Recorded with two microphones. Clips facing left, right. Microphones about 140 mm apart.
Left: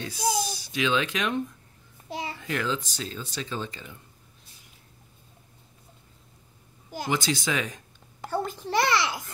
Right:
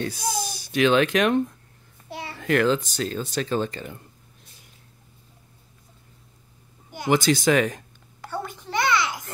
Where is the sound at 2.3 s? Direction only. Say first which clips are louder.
Right 11 dB; 60° right (ahead or behind).